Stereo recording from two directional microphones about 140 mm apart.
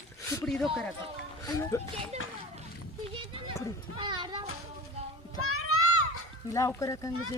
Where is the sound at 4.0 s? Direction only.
35° right (ahead or behind).